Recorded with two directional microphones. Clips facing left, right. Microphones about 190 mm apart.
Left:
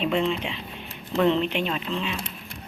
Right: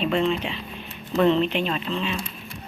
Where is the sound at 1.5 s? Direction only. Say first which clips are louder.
Right 2 dB; 10° left (ahead or behind).